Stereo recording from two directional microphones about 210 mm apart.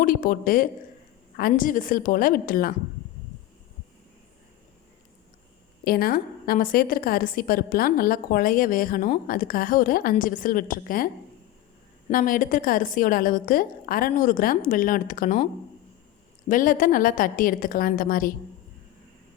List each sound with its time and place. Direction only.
0.0 s a woman's voice: 40° left (ahead or behind)
5.8 s a woman's voice: 45° left (ahead or behind)
16.5 s a woman's voice: 40° left (ahead or behind)